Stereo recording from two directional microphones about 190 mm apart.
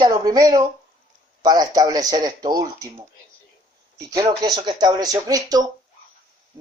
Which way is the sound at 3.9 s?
20° right (ahead or behind).